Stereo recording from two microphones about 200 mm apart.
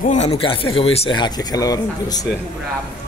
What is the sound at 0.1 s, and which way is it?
Speech, 30° left (ahead or behind).